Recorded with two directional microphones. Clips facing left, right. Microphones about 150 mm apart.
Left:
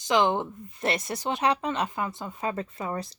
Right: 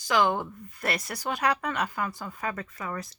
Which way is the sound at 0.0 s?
20° left (ahead or behind).